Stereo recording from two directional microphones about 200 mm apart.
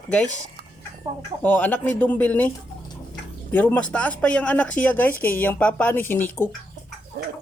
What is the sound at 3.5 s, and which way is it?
Speech, 5° left (ahead or behind).